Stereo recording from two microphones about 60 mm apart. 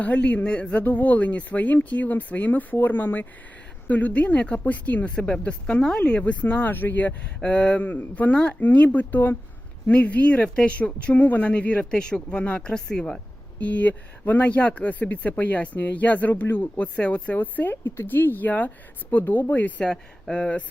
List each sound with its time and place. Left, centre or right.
0.0 s speech: left
5.1 s speech: centre
7.4 s speech: centre
13.6 s speech: left
17.3 s speech: left
19.8 s speech: centre